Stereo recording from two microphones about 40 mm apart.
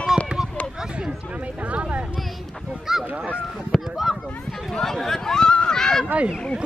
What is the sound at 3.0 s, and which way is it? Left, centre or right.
Goose, right.